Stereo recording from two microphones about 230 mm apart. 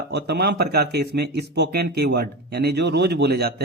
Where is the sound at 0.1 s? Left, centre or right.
Right.